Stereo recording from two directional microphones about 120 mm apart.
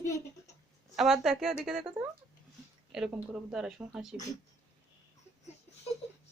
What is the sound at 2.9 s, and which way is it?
Speech, 5° right (ahead or behind).